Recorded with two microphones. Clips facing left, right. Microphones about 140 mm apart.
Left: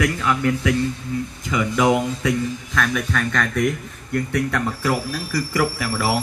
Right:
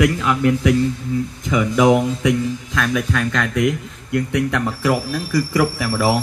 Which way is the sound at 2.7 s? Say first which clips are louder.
Right 2 dB; 5° right (ahead or behind).